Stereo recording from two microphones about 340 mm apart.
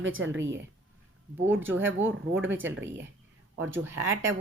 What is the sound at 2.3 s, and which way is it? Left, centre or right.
Speech, right.